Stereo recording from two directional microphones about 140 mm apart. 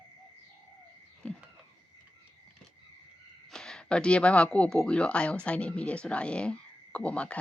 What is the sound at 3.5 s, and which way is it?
Speech, 5° left (ahead or behind).